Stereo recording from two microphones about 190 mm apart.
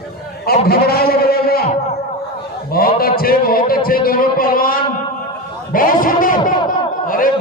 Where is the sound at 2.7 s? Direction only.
50° left (ahead or behind).